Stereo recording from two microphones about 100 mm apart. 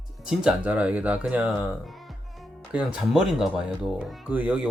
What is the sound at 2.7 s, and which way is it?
Speech, 5° right (ahead or behind).